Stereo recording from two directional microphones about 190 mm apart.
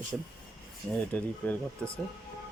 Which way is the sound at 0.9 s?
5° left (ahead or behind).